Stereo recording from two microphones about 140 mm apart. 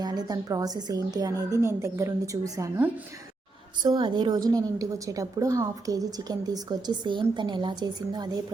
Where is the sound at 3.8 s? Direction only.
30° right (ahead or behind).